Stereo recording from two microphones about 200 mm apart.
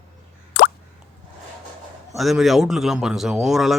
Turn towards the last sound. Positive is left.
turn(degrees=0)  # may be behind; listen again after turning